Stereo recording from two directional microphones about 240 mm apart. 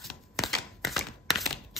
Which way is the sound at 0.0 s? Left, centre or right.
Centre.